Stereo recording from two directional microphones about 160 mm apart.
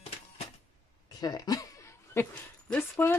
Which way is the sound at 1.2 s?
25° left (ahead or behind).